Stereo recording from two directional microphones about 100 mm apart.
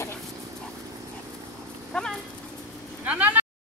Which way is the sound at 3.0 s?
15° right (ahead or behind).